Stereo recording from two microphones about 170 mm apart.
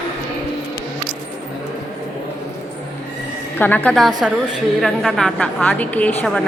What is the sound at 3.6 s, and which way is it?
A woman's voice, 10° left (ahead or behind).